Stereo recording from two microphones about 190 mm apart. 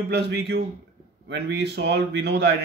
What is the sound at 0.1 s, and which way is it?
A man's voice, 65° right (ahead or behind).